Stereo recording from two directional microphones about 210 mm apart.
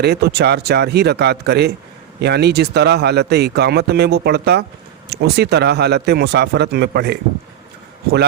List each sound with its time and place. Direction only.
0.0 s speech: 50° right (ahead or behind)